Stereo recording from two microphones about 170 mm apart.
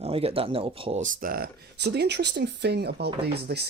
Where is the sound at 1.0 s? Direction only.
55° right (ahead or behind); by 3.6 s 70° right (ahead or behind).